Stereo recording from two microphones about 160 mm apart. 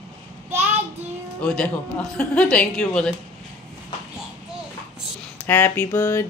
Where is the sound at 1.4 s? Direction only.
10° left (ahead or behind).